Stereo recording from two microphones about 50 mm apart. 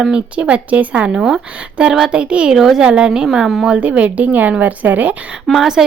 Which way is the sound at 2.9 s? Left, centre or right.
Centre.